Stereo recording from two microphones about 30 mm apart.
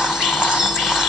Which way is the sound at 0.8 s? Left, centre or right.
Centre.